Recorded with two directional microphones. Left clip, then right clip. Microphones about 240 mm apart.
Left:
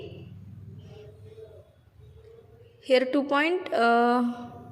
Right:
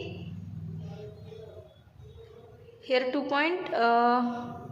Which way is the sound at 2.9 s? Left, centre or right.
Left.